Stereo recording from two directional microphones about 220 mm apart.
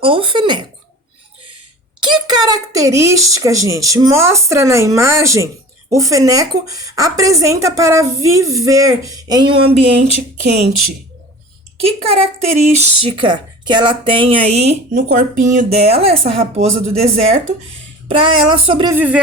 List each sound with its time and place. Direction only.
0.0 s speech: 25° right (ahead or behind)
2.0 s a woman's voice: 20° right (ahead or behind)
12.0 s speech: 25° right (ahead or behind)
18.9 s a woman's voice: 5° right (ahead or behind)